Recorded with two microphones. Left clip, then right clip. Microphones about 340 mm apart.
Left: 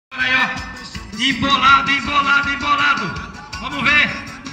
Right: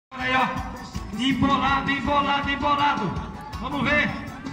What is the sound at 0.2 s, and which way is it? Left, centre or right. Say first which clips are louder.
Music: left 6 dB; right.